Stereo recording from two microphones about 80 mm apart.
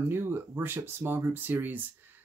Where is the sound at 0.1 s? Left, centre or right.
Right.